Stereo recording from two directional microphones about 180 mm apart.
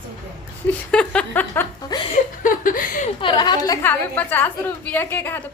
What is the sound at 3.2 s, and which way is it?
A woman's voice, 25° left (ahead or behind).